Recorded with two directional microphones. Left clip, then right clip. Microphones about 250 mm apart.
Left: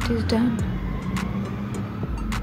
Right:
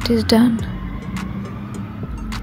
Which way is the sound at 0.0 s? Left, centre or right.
Right.